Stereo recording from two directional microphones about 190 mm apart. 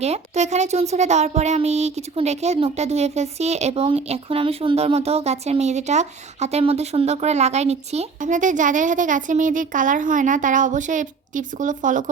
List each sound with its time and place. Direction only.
0.0 s speech: 35° right (ahead or behind)